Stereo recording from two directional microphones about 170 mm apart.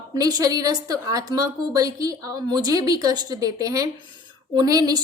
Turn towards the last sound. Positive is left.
turn(degrees=-20)  # may be behind; listen again after turning